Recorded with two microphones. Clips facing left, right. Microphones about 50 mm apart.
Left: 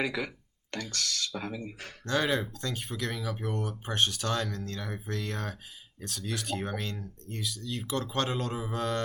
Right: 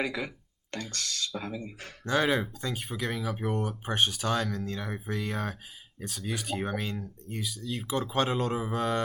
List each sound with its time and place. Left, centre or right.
0.0 s speech: left
1.4 s speech: left
2.0 s speech: centre
8.3 s mantra: centre